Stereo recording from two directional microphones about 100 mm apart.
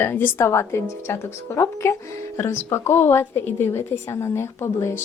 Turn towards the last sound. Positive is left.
turn(degrees=25)  # may be behind; listen again after turning